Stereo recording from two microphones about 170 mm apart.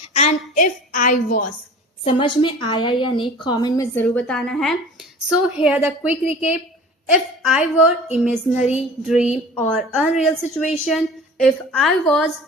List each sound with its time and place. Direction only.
0.1 s a woman's voice: 35° left (ahead or behind)
2.0 s speech: 30° left (ahead or behind)
3.9 s a woman's voice: 10° left (ahead or behind)
9.1 s a woman's voice: 40° left (ahead or behind)
9.6 s a woman's voice: 5° left (ahead or behind)